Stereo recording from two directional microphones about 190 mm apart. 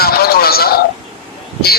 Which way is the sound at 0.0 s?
55° left (ahead or behind).